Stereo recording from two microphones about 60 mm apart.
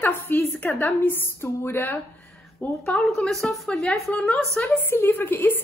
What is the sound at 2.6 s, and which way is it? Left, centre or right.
Speech, left.